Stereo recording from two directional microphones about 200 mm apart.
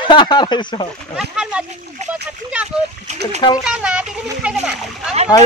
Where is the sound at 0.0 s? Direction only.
25° left (ahead or behind).